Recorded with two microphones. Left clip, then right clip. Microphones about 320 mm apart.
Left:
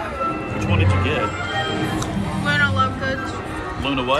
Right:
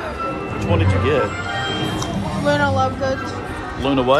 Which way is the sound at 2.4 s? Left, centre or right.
Centre.